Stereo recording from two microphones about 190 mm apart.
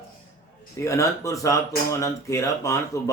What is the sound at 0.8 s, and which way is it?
A man's voice, 15° left (ahead or behind).